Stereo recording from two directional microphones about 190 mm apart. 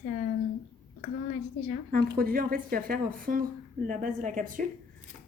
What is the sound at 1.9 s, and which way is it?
Speech, 50° right (ahead or behind).